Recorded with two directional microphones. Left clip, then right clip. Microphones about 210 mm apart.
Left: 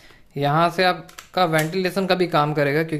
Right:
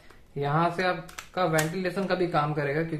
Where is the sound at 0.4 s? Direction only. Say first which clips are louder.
Left 7 dB; 50° left (ahead or behind).